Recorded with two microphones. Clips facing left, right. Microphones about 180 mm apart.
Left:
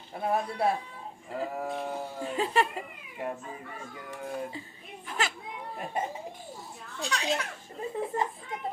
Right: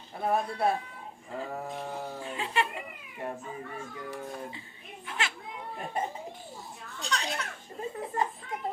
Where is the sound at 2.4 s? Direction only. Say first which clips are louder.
Left 4 dB; 40° left (ahead or behind).